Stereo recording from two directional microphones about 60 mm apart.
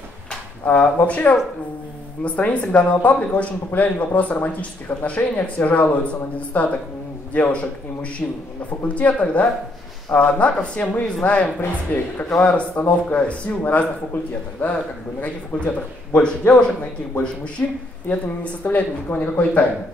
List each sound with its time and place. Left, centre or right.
0.7 s a man's voice: left
18.6 s speech: left